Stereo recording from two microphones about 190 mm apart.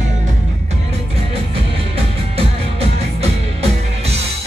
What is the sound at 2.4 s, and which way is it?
Music, 30° right (ahead or behind).